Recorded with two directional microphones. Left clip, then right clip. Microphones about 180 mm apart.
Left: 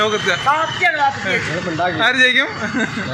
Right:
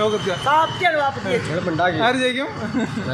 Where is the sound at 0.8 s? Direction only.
65° right (ahead or behind).